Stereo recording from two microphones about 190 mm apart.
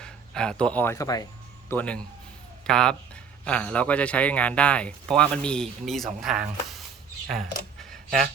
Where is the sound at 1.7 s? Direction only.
5° left (ahead or behind).